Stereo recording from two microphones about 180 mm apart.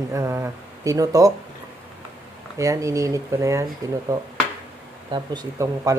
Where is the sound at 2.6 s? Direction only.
15° right (ahead or behind).